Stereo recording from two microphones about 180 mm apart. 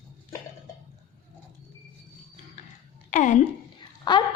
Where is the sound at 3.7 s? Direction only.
25° left (ahead or behind).